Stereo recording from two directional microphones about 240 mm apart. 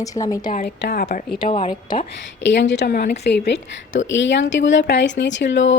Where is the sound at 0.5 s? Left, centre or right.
Left.